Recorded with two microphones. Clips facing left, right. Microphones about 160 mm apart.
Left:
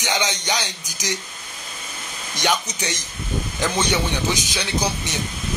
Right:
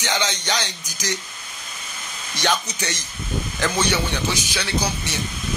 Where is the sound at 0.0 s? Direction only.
15° left (ahead or behind).